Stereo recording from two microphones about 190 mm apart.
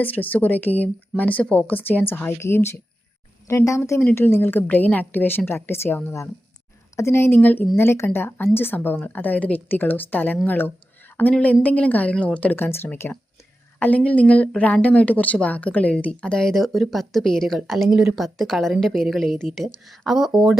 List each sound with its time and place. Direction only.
0.0 s speech: 10° left (ahead or behind)